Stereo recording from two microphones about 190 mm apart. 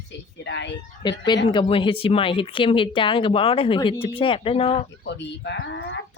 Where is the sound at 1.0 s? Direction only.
20° left (ahead or behind).